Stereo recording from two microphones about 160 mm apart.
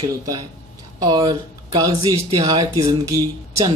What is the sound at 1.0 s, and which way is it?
Speech, 25° right (ahead or behind).